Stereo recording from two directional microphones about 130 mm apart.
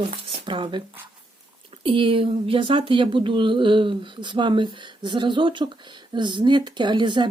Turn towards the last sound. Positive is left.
turn(degrees=-35)  # may be behind; listen again after turning